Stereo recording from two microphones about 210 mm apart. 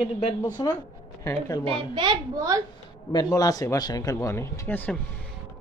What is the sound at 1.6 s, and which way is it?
A child's voice, 25° right (ahead or behind).